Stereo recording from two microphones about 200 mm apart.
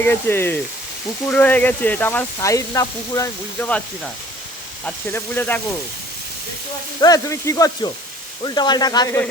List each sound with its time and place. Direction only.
0.0 s speech: 10° left (ahead or behind)
7.0 s speech: 15° left (ahead or behind)